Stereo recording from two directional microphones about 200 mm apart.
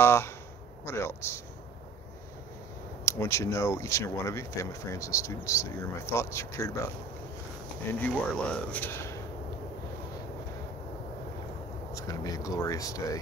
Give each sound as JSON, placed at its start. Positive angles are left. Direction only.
{"t": 0.0, "sound": "speech", "side_deg": 10}
{"t": 3.1, "sound": "speech", "side_deg": 15}
{"t": 8.0, "sound": "speech", "side_deg": 5}
{"t": 11.9, "sound": "speech", "side_deg": 15}